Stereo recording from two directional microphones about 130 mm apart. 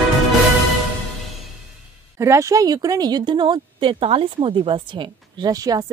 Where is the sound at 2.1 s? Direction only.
20° right (ahead or behind).